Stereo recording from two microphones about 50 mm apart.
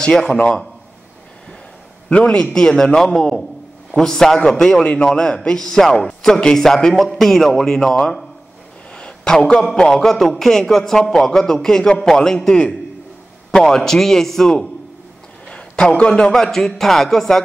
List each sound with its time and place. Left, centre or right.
0.1 s speech: centre
2.0 s a man's voice: centre
15.4 s a sound: centre
16.0 s a man's voice: centre